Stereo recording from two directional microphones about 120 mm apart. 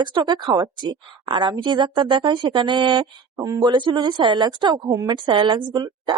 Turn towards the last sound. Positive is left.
turn(degrees=-40)  # may be behind; listen again after turning